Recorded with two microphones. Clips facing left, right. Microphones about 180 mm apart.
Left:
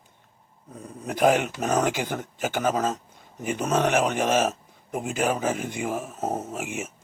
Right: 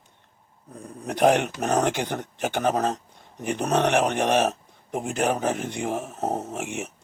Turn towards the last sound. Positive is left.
turn(degrees=0)  # may be behind; listen again after turning